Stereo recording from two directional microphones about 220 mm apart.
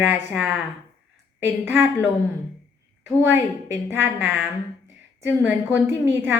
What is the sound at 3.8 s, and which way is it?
A woman's voice, 10° right (ahead or behind).